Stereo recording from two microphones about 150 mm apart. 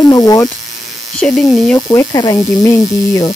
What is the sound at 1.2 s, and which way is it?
Speech, centre (ahead or behind).